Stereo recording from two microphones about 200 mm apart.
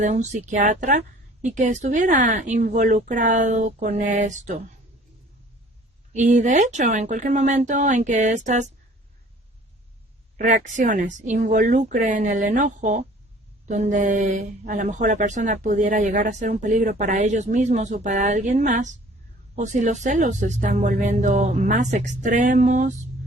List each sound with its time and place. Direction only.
0.0 s speech: 35° right (ahead or behind)
6.1 s speech: 35° right (ahead or behind)
10.3 s speech: 40° right (ahead or behind)